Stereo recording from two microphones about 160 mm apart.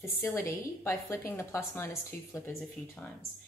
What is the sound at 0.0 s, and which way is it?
A woman's voice, 15° left (ahead or behind).